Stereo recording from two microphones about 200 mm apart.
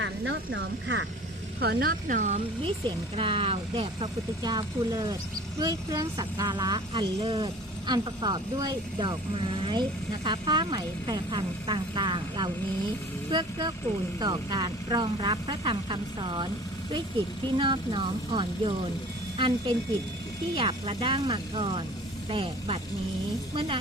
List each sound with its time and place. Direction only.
0.0 s speech: 65° right (ahead or behind)
1.5 s speech: 55° right (ahead or behind)
3.2 s speech: 25° right (ahead or behind)
17.6 s speech: 25° right (ahead or behind)